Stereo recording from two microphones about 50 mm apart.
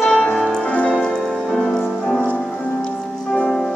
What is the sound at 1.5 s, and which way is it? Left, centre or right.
Music, centre.